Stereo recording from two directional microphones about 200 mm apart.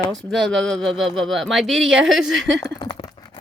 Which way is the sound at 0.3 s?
Centre (ahead or behind).